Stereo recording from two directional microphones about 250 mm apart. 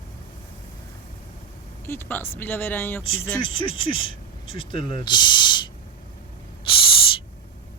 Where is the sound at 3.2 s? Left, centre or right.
Left.